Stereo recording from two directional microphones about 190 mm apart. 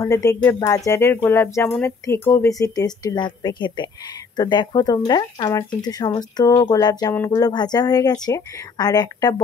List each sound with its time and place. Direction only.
0.0 s speech: 15° left (ahead or behind)